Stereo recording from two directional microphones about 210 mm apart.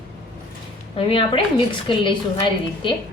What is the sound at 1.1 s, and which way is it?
A woman's voice, 25° left (ahead or behind).